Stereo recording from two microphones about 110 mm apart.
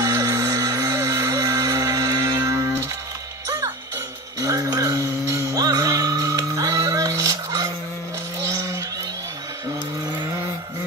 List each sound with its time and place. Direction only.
0.0 s music: 30° right (ahead or behind)
4.4 s music: 35° right (ahead or behind)
8.5 s a sound: 30° right (ahead or behind)